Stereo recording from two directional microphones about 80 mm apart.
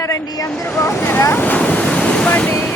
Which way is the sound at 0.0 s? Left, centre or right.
Left.